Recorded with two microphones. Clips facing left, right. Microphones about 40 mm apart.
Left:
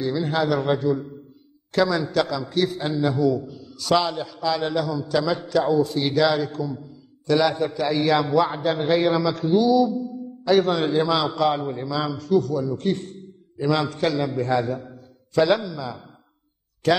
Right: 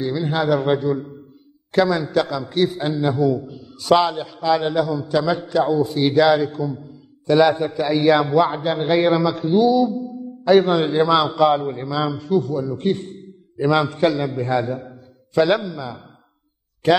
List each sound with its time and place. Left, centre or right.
0.0 s a man's voice: centre
3.3 s a man's voice: right
4.4 s a man's voice: right
4.6 s a man's voice: centre
8.4 s a man's voice: right
14.1 s a man's voice: centre
14.7 s mantra: centre
16.8 s a man's voice: right